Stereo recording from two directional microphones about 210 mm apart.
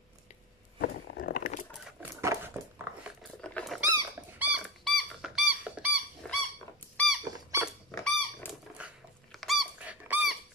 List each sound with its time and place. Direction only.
0.7 s a sound: 45° left (ahead or behind)
1.9 s dog: 10° right (ahead or behind)
3.2 s dog: 5° left (ahead or behind)
6.2 s dog: 5° left (ahead or behind)
7.2 s squeak: 15° right (ahead or behind)
7.6 s dog: 5° left (ahead or behind)
8.7 s squeak: centre (ahead or behind)